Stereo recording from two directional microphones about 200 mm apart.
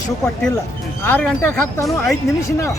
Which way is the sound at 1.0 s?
10° left (ahead or behind).